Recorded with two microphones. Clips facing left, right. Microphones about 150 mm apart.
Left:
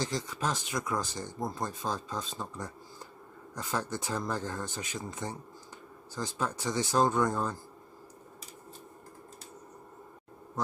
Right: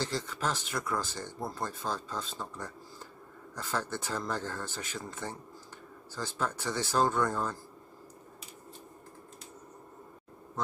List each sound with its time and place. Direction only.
0.0 s speech: 15° left (ahead or behind)